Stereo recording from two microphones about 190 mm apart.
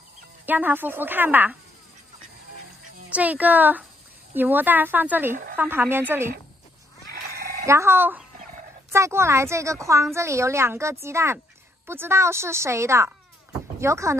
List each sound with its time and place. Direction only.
0.5 s a woman's voice: 10° right (ahead or behind)
3.1 s a woman's voice: 10° right (ahead or behind)
5.3 s speech: 45° right (ahead or behind)
5.6 s a woman's voice: 10° right (ahead or behind)
7.6 s a woman's voice: 15° right (ahead or behind)